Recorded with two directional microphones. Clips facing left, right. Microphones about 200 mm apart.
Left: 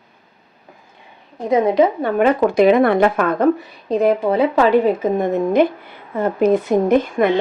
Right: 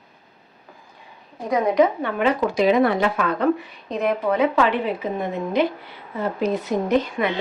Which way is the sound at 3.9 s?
35° left (ahead or behind).